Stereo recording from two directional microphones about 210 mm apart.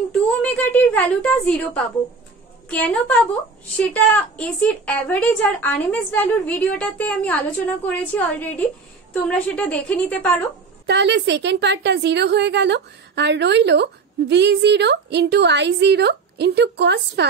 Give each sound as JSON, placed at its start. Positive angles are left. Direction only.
{"t": 0.4, "sound": "a woman's voice", "side_deg": 5}
{"t": 10.9, "sound": "a woman's voice", "side_deg": -55}